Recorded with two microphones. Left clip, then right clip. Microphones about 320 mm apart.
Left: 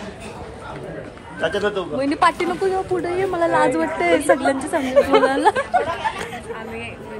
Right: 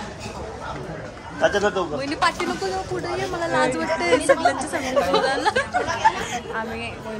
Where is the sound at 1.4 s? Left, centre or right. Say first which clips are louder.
Right 1 dB; right.